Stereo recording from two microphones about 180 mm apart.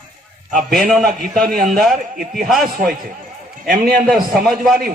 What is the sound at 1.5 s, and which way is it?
Speech, 50° right (ahead or behind).